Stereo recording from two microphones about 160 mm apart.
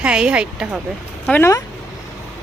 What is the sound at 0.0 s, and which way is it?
Speech, 5° right (ahead or behind).